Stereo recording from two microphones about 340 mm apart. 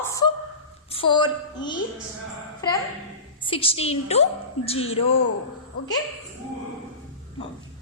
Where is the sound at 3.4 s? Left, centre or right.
Centre.